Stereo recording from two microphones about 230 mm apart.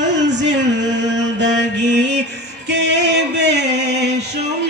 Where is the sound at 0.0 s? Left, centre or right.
Right.